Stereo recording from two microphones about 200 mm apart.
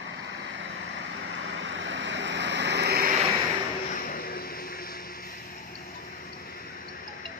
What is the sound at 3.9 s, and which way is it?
Vehicle, 45° left (ahead or behind).